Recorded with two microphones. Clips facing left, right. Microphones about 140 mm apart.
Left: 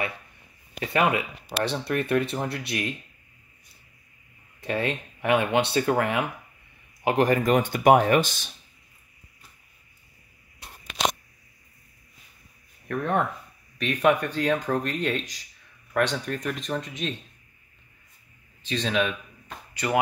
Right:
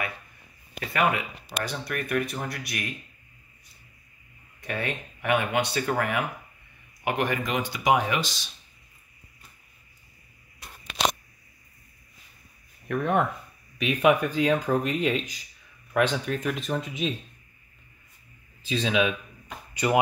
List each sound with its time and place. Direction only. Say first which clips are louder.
0.7 s speech: left 2 dB; 25° left (ahead or behind)
4.6 s speech: left 4 dB; 30° left (ahead or behind)
7.1 s speech: left 6 dB; 35° left (ahead or behind); by 8.5 s 55° left (ahead or behind)
12.8 s speech: right 1 dB; 5° right (ahead or behind)
18.6 s speech: right 1 dB; 5° right (ahead or behind)
19.7 s speech: right 2 dB; 20° right (ahead or behind)